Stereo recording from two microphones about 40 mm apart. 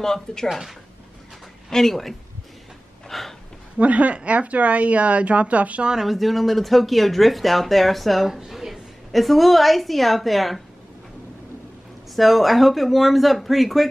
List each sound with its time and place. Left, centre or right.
0.0 s speech: centre
0.5 s speech: centre
1.7 s speech: centre
3.1 s a sound: centre
3.7 s speech: right
6.0 s a woman's voice: centre
12.2 s speech: centre